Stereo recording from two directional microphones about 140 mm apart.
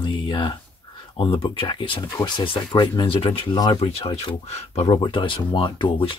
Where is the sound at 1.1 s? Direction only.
40° left (ahead or behind).